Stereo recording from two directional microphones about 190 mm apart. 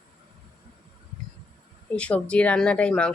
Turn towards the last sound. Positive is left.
turn(degrees=5)  # may be behind; listen again after turning